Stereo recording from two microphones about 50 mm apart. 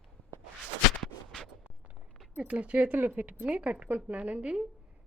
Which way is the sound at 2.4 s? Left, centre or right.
Right.